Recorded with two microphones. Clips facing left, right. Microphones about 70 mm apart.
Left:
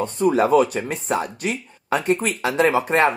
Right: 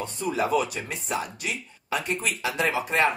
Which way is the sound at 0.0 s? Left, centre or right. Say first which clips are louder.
Left 9 dB; left.